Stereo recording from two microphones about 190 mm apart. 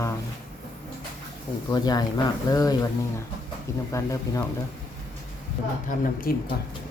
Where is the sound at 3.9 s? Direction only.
15° left (ahead or behind).